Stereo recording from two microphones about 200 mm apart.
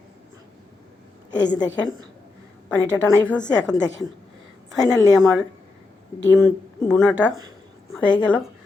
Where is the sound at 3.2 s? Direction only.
5° left (ahead or behind).